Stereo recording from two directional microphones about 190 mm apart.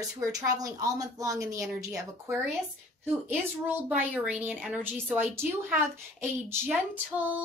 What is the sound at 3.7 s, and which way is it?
Speech, 10° right (ahead or behind).